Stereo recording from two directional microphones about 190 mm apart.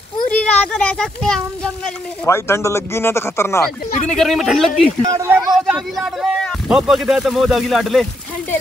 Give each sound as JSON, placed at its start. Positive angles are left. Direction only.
{"t": 0.3, "sound": "a child's voice", "side_deg": 5}
{"t": 2.2, "sound": "speech", "side_deg": 15}
{"t": 4.1, "sound": "speech", "side_deg": 0}
{"t": 5.0, "sound": "speech", "side_deg": -15}
{"t": 5.7, "sound": "a man's voice", "side_deg": 0}